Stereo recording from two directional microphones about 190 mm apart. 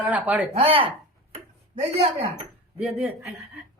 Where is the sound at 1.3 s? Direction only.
35° right (ahead or behind).